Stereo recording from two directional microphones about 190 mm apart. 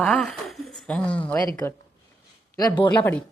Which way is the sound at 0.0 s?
5° left (ahead or behind).